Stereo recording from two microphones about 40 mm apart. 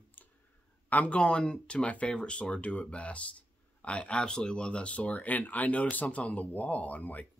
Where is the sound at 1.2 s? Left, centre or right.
Left.